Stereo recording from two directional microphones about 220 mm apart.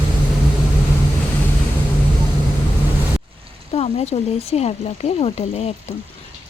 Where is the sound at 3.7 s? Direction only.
30° left (ahead or behind).